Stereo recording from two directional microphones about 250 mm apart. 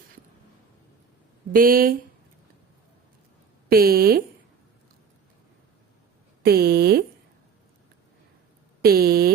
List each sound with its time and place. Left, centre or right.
1.5 s speech: right
3.7 s speech: right
6.4 s speech: right
8.8 s speech: right